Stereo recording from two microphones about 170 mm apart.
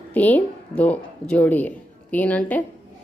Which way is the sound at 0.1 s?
10° left (ahead or behind).